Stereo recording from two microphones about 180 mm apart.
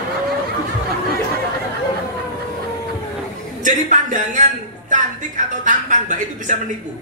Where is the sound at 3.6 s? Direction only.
45° right (ahead or behind).